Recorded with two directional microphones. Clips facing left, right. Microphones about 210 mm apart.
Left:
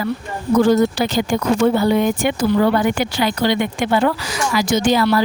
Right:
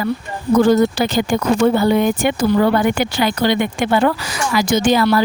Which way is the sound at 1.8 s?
55° right (ahead or behind).